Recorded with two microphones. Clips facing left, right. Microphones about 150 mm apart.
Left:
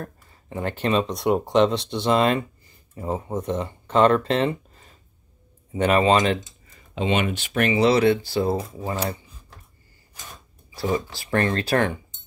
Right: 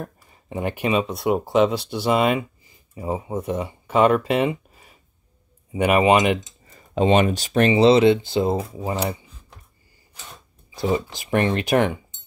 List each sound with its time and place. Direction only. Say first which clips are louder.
0.0 s speech: right 2 dB; 15° right (ahead or behind)
6.7 s speech: right 6 dB; 35° right (ahead or behind); by 9.6 s 20° right (ahead or behind)
10.7 s speech: right 2 dB; 20° right (ahead or behind)